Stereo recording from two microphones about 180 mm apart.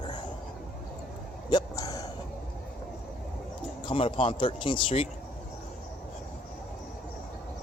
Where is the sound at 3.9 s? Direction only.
30° left (ahead or behind).